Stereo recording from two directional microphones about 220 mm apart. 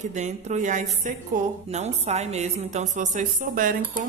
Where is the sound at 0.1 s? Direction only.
35° right (ahead or behind).